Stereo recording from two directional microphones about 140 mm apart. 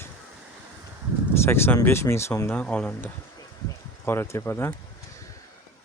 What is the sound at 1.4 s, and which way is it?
Speech, 15° left (ahead or behind).